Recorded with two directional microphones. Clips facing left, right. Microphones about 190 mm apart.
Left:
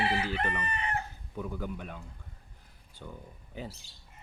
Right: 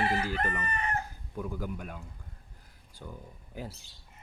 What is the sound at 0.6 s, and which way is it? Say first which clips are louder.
Chicken: right 1 dB; 45° right (ahead or behind).